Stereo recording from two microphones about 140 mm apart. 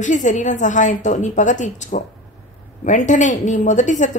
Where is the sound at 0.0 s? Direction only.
60° left (ahead or behind).